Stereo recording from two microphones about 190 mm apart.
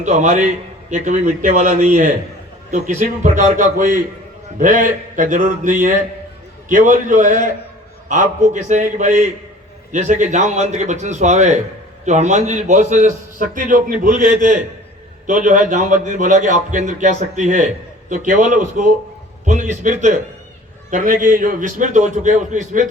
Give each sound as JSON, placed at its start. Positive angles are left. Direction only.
{"t": 0.0, "sound": "a man's voice", "side_deg": -40}